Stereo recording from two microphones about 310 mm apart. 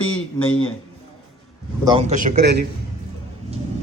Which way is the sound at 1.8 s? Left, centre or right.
Centre.